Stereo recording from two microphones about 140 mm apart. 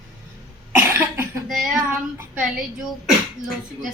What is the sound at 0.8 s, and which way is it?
Cough, 15° right (ahead or behind).